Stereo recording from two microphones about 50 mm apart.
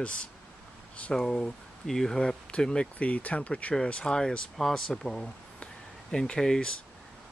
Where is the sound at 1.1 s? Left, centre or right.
Centre.